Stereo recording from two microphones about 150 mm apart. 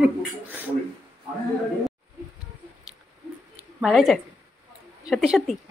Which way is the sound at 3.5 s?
Centre (ahead or behind).